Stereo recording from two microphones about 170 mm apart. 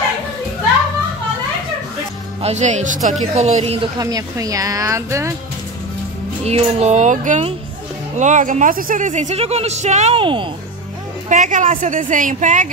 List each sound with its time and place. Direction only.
2.4 s speech: 45° right (ahead or behind)
4.0 s speech: 20° right (ahead or behind)
6.4 s speech: 40° right (ahead or behind)
11.2 s speech: 50° right (ahead or behind)